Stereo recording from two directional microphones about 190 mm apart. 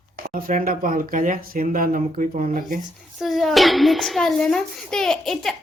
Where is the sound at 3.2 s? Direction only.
Centre (ahead or behind).